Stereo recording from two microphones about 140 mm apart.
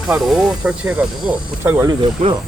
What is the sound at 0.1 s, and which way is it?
Speech, 5° right (ahead or behind).